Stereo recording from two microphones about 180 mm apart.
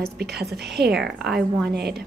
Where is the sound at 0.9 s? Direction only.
Centre (ahead or behind).